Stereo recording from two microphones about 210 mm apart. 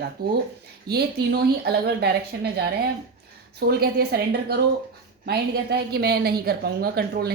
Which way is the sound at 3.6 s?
50° right (ahead or behind).